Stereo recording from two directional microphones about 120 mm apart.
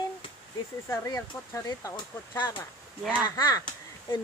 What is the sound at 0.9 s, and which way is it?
Speech, 25° left (ahead or behind).